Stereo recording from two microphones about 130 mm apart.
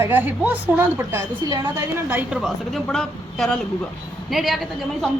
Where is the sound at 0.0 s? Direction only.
15° right (ahead or behind).